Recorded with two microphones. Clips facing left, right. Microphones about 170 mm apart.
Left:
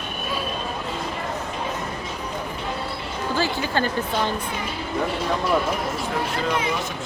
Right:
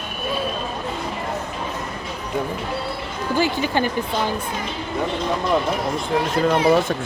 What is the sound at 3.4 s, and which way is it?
Speech, 15° right (ahead or behind).